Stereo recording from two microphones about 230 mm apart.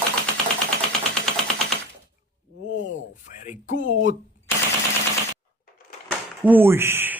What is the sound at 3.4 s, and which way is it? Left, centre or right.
Speech, left.